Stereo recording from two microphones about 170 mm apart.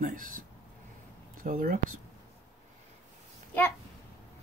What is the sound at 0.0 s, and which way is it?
Speech, 55° right (ahead or behind).